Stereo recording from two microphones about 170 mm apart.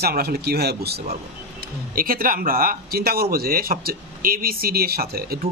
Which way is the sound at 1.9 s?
55° right (ahead or behind).